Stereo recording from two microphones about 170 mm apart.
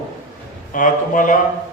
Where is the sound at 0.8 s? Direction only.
50° left (ahead or behind).